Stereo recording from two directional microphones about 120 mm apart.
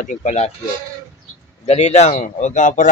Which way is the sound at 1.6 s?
65° left (ahead or behind).